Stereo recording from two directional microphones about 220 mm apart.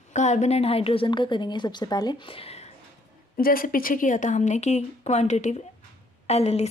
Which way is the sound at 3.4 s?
40° left (ahead or behind).